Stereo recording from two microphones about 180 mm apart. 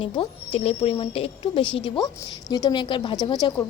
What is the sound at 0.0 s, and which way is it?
A woman's voice, 30° left (ahead or behind).